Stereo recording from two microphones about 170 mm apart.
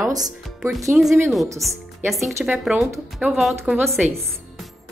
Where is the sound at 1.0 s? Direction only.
5° right (ahead or behind).